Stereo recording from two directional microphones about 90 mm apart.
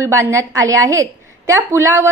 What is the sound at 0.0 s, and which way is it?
A woman's voice, 35° right (ahead or behind).